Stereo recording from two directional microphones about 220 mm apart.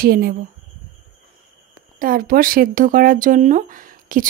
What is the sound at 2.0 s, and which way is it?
Speech, 40° right (ahead or behind).